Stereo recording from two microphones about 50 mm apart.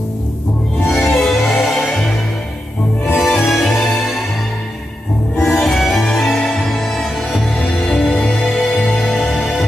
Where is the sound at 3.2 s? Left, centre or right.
Centre.